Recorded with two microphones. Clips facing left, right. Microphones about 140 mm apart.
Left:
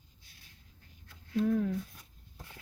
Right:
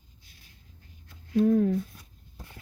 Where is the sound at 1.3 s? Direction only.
40° right (ahead or behind).